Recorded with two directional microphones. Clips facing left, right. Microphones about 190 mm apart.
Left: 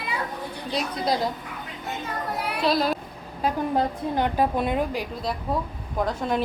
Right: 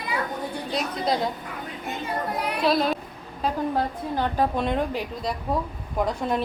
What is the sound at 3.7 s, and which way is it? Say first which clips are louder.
A woman's voice: left 2 dB; 15° left (ahead or behind).